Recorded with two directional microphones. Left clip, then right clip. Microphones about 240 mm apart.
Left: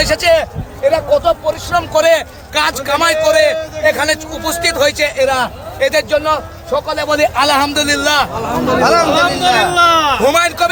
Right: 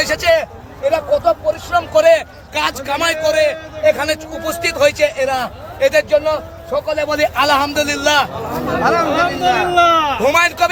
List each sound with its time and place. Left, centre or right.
0.0 s a man's voice: centre
8.8 s speech: left
10.2 s a man's voice: centre